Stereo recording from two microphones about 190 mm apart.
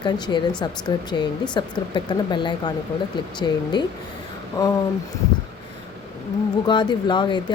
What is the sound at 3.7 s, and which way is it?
Speech, 25° left (ahead or behind).